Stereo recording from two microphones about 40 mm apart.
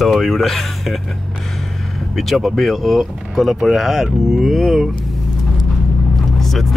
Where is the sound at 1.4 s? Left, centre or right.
Centre.